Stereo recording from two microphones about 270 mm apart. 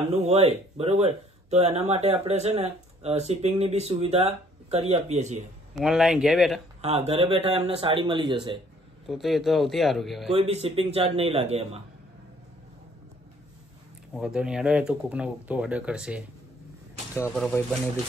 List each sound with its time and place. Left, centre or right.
0.1 s speech: right
5.8 s speech: centre
6.8 s speech: right
9.0 s speech: centre
10.3 s speech: right
14.1 s speech: centre